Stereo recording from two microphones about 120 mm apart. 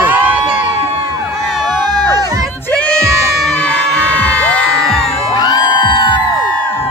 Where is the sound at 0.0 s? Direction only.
15° right (ahead or behind).